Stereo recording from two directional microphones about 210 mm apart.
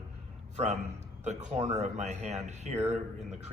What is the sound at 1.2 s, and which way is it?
A man's voice, 35° right (ahead or behind).